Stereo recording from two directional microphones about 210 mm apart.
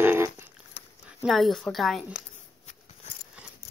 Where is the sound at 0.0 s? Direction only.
10° right (ahead or behind).